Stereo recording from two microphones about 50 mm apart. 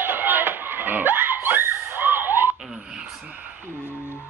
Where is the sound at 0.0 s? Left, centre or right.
Right.